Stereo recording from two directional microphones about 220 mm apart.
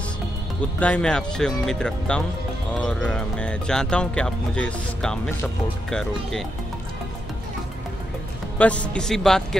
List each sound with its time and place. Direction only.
0.7 s speech: 5° left (ahead or behind)
8.5 s speech: 5° left (ahead or behind)